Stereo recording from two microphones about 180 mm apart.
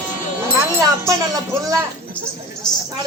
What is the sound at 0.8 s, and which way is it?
Speech, 20° right (ahead or behind).